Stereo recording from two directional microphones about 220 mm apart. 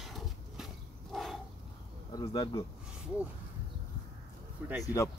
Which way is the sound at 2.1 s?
20° left (ahead or behind).